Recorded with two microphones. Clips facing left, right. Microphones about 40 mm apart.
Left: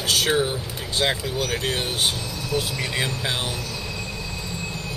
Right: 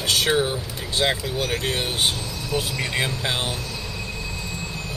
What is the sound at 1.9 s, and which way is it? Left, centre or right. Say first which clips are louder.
Speech: right 1 dB; centre.